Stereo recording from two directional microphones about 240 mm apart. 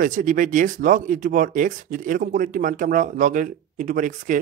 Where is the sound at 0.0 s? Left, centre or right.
Right.